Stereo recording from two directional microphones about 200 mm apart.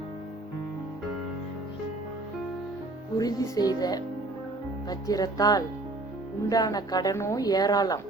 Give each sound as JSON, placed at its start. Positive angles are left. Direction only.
{"t": 3.2, "sound": "a woman's voice", "side_deg": 20}